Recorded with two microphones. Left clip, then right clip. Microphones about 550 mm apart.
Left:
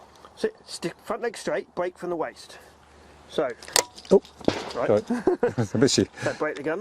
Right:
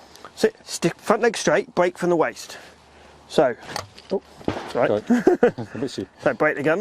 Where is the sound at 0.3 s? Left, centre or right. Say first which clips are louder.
Right 7 dB; right.